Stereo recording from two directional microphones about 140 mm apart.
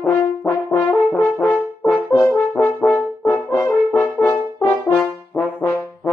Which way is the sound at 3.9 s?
5° left (ahead or behind).